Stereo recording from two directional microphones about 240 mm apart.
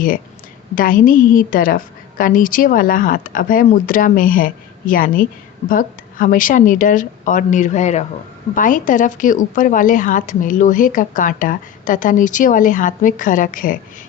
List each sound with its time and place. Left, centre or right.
0.8 s speech: left